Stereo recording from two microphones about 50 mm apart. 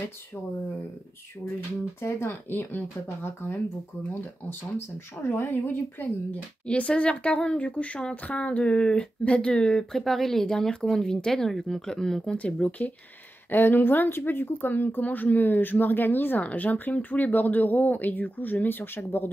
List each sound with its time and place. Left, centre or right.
2.0 s speech: left
5.3 s speech: left
6.7 s speech: left
9.9 s speech: centre
12.4 s speech: left
13.5 s speech: left